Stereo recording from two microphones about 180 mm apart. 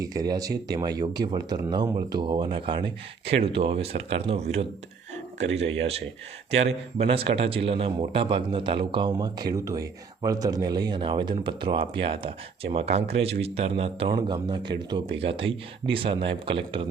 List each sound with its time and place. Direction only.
0.0 s a man's voice: 20° right (ahead or behind); by 4.6 s 35° right (ahead or behind)
6.5 s a man's voice: 35° right (ahead or behind)